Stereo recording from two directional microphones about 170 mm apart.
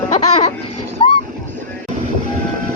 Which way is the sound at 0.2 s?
35° left (ahead or behind).